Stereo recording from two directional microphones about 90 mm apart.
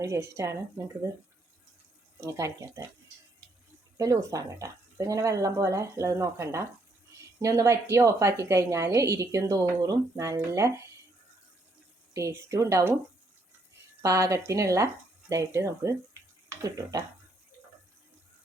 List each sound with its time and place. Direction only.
0.0 s a woman's voice: 35° right (ahead or behind)
2.2 s a woman's voice: 35° right (ahead or behind)
3.9 s a woman's voice: 40° right (ahead or behind)
12.1 s a woman's voice: 35° right (ahead or behind)
14.0 s a woman's voice: 35° right (ahead or behind)